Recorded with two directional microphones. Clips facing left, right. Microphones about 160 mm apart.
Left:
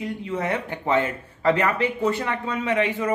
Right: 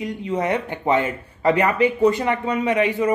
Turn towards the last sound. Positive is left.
turn(degrees=-15)  # may be behind; listen again after turning